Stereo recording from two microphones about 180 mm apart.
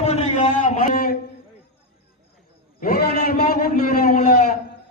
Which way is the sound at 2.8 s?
60° left (ahead or behind).